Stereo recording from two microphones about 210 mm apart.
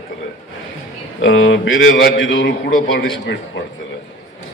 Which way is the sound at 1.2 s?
65° left (ahead or behind).